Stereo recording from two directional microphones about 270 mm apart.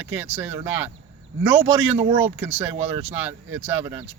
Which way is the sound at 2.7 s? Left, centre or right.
Right.